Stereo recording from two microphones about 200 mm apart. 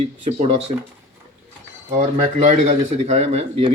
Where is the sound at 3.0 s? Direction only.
35° right (ahead or behind).